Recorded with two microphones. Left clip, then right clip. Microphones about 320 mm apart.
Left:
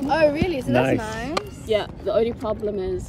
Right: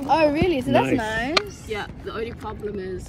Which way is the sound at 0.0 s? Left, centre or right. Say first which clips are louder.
Even; centre.